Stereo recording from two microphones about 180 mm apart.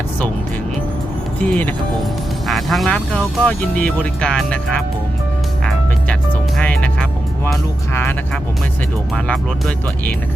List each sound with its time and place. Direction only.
1.4 s speech: 10° left (ahead or behind)
6.6 s music: 5° left (ahead or behind)
9.1 s speech: 5° left (ahead or behind)